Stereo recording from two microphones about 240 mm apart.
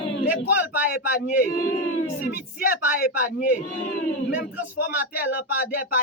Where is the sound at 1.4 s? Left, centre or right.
Left.